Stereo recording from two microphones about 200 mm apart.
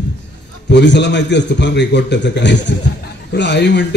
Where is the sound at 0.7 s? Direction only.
60° left (ahead or behind).